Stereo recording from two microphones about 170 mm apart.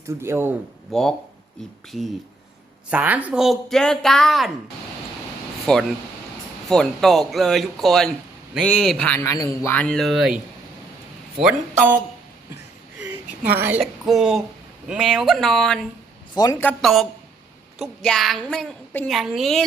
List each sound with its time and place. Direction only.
0.1 s speech: 15° right (ahead or behind)
0.9 s speech: 5° left (ahead or behind)
2.9 s speech: 10° right (ahead or behind)
5.7 s speech: 5° left (ahead or behind)
13.6 s speech: 10° right (ahead or behind)
16.3 s a man's voice: 20° left (ahead or behind)
16.6 s speech: 5° left (ahead or behind)